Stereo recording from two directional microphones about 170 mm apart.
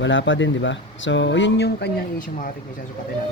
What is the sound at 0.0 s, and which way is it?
Speech, 90° left.